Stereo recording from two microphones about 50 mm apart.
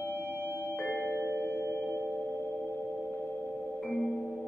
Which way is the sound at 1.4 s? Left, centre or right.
Left.